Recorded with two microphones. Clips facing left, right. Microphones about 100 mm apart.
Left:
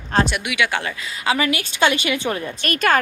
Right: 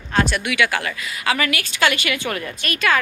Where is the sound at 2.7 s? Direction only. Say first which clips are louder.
Left 2 dB; 45° left (ahead or behind).